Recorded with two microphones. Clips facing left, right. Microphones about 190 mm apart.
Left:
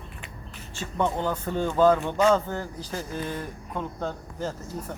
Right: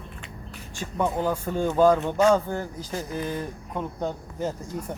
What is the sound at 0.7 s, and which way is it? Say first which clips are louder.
Speech: even; 10° right (ahead or behind).